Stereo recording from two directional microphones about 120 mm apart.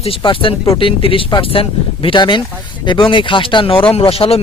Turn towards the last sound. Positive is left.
turn(degrees=55)  # may be behind; listen again after turning